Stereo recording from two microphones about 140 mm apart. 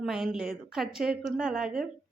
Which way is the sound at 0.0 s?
Centre (ahead or behind).